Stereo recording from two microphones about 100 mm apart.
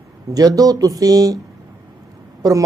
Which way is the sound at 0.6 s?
35° right (ahead or behind).